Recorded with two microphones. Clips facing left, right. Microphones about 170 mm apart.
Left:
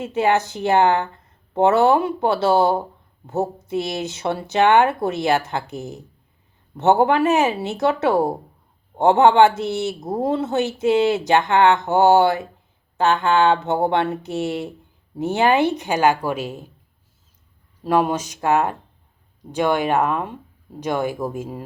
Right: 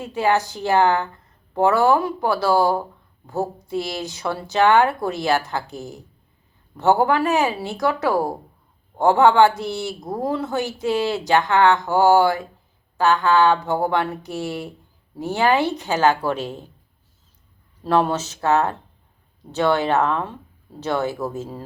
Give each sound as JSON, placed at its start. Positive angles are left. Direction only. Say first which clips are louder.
{"t": 0.0, "sound": "speech", "louder": "left 1 dB", "side_deg": 20}
{"t": 17.8, "sound": "speech", "louder": "even", "side_deg": 10}